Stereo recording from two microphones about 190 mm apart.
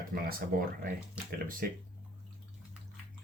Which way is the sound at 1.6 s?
50° right (ahead or behind).